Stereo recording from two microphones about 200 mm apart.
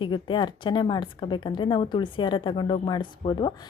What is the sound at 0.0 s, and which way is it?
A woman's voice, 25° left (ahead or behind).